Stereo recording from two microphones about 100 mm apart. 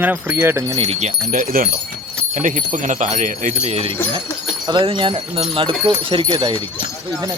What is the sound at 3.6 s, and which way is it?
Speech, 90° right.